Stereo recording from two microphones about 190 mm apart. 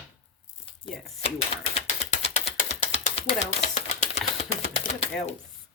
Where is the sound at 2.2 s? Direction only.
35° left (ahead or behind).